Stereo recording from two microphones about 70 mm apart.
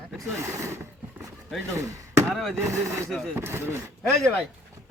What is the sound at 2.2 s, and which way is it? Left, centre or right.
Speech, centre.